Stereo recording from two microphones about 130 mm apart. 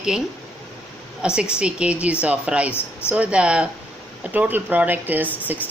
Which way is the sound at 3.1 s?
10° right (ahead or behind).